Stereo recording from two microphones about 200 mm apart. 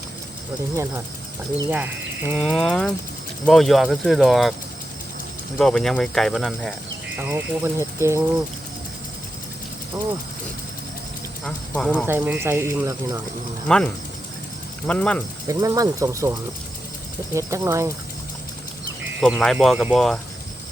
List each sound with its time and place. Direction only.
1.7 s speech: 10° right (ahead or behind)
5.5 s speech: 5° left (ahead or behind)
7.2 s speech: 10° right (ahead or behind)
9.9 s speech: 20° right (ahead or behind)
11.4 s speech: 5° left (ahead or behind)
12.0 s speech: 10° right (ahead or behind)
13.7 s speech: 5° left (ahead or behind)
15.4 s speech: 15° right (ahead or behind)
19.2 s speech: centre (ahead or behind)